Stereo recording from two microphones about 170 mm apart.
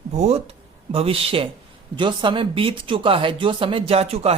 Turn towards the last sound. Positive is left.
turn(degrees=-35)  # may be behind; listen again after turning